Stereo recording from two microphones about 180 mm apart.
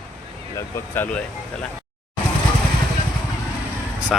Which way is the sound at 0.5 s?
15° left (ahead or behind).